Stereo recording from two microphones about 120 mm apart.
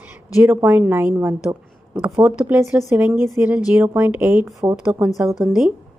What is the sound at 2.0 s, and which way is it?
Speech, 5° right (ahead or behind).